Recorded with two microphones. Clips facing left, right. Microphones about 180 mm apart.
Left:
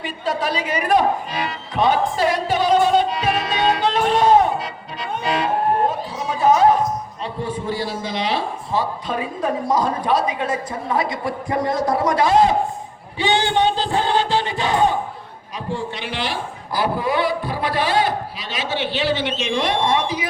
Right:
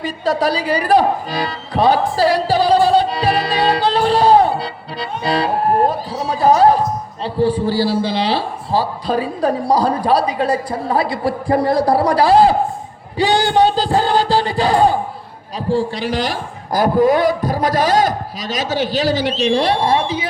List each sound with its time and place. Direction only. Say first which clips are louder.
0.0 s music: right 6 dB; 35° right (ahead or behind)
7.3 s a man's voice: right 9 dB; 35° right (ahead or behind)